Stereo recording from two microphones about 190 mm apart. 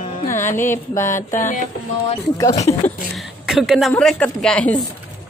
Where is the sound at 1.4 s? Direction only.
40° left (ahead or behind).